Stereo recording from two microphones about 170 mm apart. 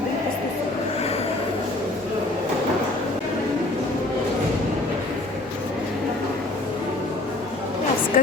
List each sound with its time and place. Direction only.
8.1 s speech: 55° left (ahead or behind)